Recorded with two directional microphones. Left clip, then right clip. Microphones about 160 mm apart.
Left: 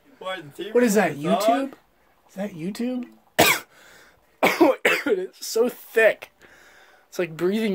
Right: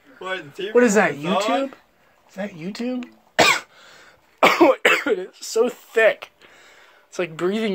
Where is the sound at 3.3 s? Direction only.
55° left (ahead or behind).